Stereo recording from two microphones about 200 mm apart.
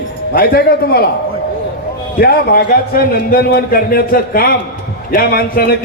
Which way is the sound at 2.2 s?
50° left (ahead or behind).